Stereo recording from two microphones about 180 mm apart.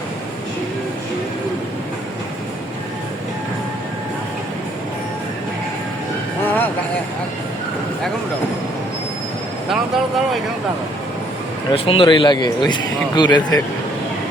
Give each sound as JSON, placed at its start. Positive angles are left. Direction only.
{"t": 6.4, "sound": "music", "side_deg": 10}
{"t": 9.6, "sound": "vehicle", "side_deg": 0}
{"t": 11.7, "sound": "a man's voice", "side_deg": 30}